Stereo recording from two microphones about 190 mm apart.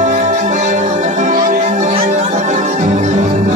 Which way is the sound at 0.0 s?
40° right (ahead or behind).